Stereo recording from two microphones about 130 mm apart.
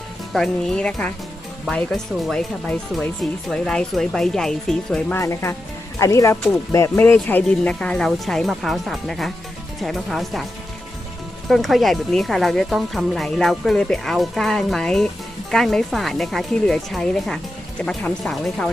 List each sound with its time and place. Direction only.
0.3 s speech: 5° left (ahead or behind)
5.2 s speech: 20° left (ahead or behind); by 10.4 s centre (ahead or behind)
11.4 s speech: centre (ahead or behind)